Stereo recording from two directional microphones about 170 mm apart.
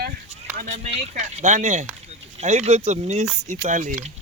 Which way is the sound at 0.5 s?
40° right (ahead or behind).